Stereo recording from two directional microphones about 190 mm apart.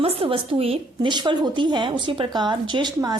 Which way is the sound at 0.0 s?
30° right (ahead or behind).